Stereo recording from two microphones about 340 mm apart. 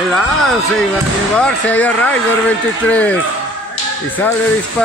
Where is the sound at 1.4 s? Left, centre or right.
Centre.